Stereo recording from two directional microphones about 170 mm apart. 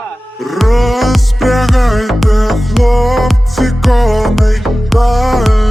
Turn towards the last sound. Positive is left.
turn(degrees=0)  # may be behind; listen again after turning